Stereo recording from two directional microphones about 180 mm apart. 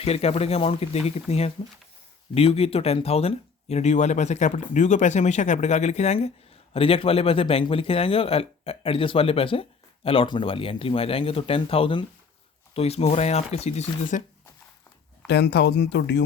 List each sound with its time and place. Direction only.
0.0 s speech: 35° left (ahead or behind)
15.3 s speech: 70° left (ahead or behind)